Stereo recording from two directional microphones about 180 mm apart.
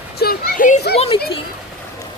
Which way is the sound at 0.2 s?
55° left (ahead or behind).